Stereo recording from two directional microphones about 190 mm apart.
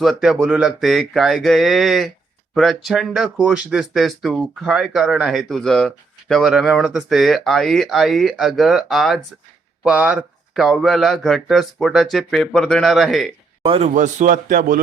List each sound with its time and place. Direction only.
0.0 s speech: centre (ahead or behind)
13.7 s a man's voice: 35° right (ahead or behind)